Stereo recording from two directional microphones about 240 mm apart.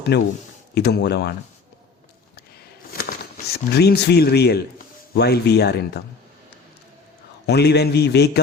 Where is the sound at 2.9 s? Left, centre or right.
Left.